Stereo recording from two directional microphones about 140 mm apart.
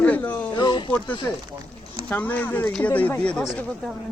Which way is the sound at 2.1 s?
10° left (ahead or behind).